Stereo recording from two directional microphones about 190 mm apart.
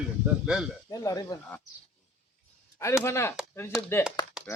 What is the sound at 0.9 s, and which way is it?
Speech, 20° left (ahead or behind).